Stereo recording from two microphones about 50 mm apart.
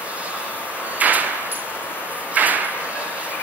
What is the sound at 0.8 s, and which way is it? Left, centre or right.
Sliding door, right.